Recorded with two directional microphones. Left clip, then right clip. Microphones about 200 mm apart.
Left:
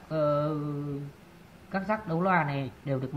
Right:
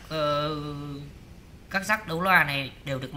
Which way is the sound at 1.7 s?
25° right (ahead or behind).